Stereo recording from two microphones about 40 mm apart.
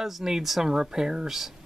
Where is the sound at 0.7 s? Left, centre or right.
Centre.